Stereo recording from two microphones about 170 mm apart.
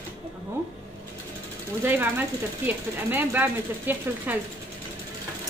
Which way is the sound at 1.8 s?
10° right (ahead or behind).